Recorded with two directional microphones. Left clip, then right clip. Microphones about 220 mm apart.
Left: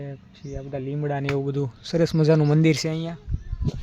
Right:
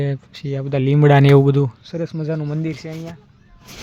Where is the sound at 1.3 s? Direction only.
35° right (ahead or behind).